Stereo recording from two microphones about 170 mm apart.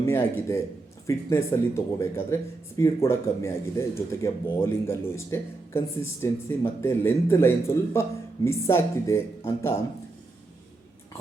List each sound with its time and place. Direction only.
0.0 s speech: 15° left (ahead or behind)